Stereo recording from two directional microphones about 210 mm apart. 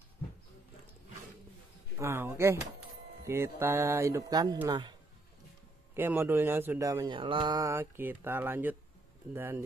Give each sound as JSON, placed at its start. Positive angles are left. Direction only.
{"t": 2.0, "sound": "speech", "side_deg": -10}
{"t": 5.9, "sound": "speech", "side_deg": -10}